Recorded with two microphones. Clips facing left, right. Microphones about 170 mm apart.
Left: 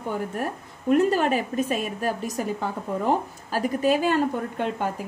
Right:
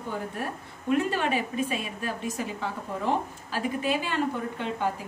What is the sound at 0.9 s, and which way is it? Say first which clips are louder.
A woman's voice: left 5 dB; 40° left (ahead or behind).